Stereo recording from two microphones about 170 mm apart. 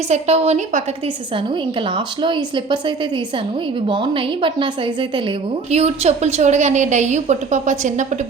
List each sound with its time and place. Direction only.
0.1 s a woman's voice: 40° right (ahead or behind)
2.2 s a woman's voice: 30° right (ahead or behind); by 8.0 s 45° right (ahead or behind)